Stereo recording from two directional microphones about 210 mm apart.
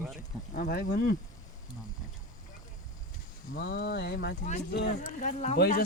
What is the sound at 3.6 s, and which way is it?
Speech, 50° left (ahead or behind).